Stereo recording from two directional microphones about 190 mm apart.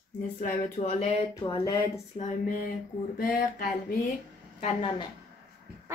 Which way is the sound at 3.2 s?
50° left (ahead or behind).